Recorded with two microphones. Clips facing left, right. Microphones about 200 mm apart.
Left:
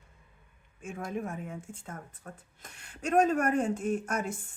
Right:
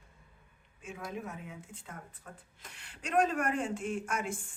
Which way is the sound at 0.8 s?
50° left (ahead or behind).